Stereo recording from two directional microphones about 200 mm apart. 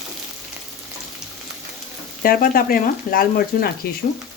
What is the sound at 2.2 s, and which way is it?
Speech, 45° left (ahead or behind).